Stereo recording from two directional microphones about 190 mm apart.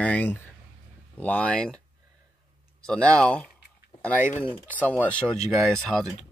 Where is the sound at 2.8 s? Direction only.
5° left (ahead or behind).